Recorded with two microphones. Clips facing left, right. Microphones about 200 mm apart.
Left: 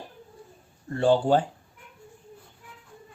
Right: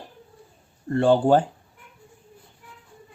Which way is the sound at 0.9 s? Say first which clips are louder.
Right 3 dB; 55° right (ahead or behind).